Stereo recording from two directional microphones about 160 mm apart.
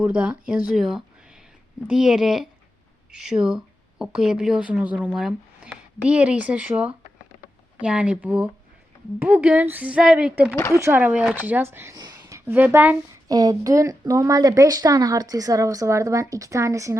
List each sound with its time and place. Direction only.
0.0 s speech: 5° right (ahead or behind)
10.5 s speech: 15° left (ahead or behind)
10.8 s speech: 15° right (ahead or behind)
11.9 s a sound: 25° right (ahead or behind)
13.2 s speech: 25° right (ahead or behind)